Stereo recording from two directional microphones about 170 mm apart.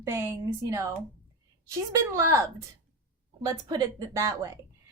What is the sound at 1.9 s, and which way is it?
A woman's voice, 20° right (ahead or behind).